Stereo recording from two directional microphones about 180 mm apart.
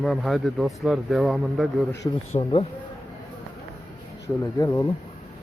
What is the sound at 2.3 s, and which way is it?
Speech, 35° left (ahead or behind).